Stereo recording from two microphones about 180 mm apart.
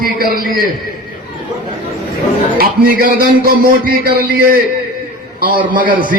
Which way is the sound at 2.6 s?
55° right (ahead or behind).